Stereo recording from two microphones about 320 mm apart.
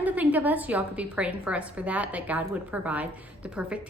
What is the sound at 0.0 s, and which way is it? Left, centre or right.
A woman's voice, centre.